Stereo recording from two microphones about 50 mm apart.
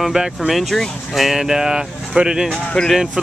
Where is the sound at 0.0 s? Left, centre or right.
Centre.